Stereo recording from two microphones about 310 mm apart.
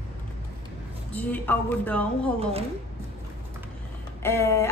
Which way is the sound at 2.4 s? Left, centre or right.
Centre.